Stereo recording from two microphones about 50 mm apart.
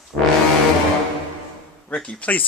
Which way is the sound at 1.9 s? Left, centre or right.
Left.